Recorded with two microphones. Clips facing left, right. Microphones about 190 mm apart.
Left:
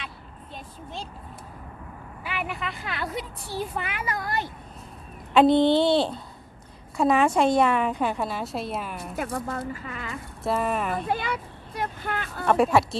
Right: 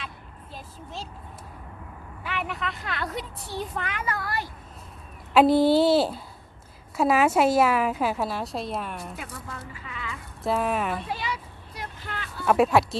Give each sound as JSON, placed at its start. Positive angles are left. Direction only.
{"t": 0.5, "sound": "a woman's voice", "side_deg": 0}
{"t": 2.2, "sound": "a woman's voice", "side_deg": 5}
{"t": 5.3, "sound": "a woman's voice", "side_deg": -5}
{"t": 9.1, "sound": "speech", "side_deg": 50}
{"t": 10.4, "sound": "a woman's voice", "side_deg": 0}
{"t": 11.1, "sound": "speech", "side_deg": 55}
{"t": 12.5, "sound": "a woman's voice", "side_deg": 0}